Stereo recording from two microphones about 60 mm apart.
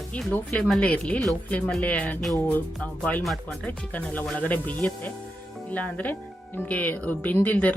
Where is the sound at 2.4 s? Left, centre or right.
Left.